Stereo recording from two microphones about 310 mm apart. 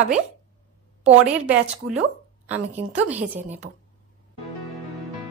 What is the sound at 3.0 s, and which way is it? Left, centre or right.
Speech, centre.